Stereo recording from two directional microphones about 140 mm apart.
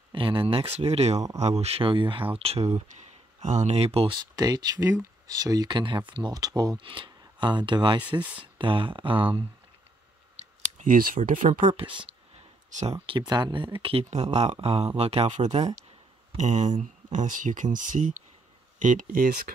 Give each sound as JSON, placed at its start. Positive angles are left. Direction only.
{"t": 0.1, "sound": "speech", "side_deg": -40}
{"t": 8.0, "sound": "speech", "side_deg": -10}
{"t": 8.5, "sound": "speech", "side_deg": -35}
{"t": 10.4, "sound": "clicking", "side_deg": -70}
{"t": 11.2, "sound": "speech", "side_deg": -70}
{"t": 11.7, "sound": "speech", "side_deg": -35}
{"t": 13.3, "sound": "speech", "side_deg": -30}
{"t": 14.1, "sound": "speech", "side_deg": -55}